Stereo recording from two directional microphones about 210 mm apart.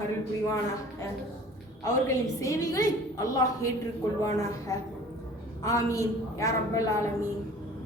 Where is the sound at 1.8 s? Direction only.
15° left (ahead or behind).